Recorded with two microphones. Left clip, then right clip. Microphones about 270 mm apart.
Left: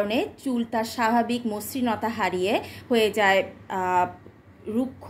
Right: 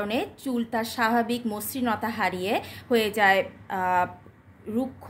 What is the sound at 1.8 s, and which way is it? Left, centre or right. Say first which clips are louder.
Speech: left 1 dB; right.